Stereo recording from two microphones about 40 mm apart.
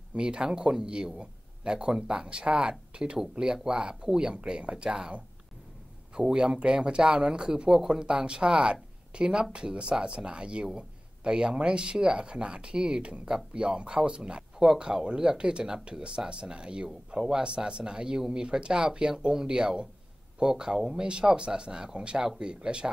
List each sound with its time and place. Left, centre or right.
0.1 s speech: right
6.1 s speech: right